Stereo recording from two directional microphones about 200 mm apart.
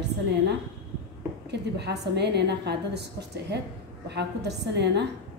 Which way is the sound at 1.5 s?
55° right (ahead or behind).